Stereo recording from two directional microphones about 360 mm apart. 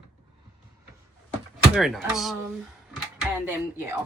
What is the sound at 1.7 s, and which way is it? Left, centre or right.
A woman's voice, centre.